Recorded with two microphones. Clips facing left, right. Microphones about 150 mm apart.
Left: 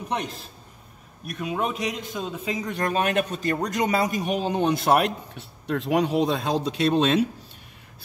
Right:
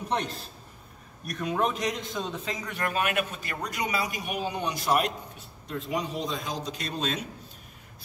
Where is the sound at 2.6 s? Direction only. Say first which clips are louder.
Left 5 dB; 30° left (ahead or behind).